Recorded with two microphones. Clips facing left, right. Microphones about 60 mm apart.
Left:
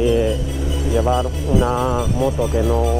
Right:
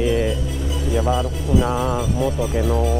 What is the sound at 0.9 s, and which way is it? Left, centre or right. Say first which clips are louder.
Music: left 3 dB; centre.